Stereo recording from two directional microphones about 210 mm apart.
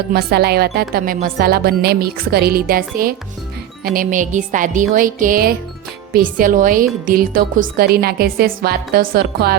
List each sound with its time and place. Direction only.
0.1 s speech: 50° right (ahead or behind)
3.8 s music: 40° right (ahead or behind)
7.0 s speech: 40° right (ahead or behind)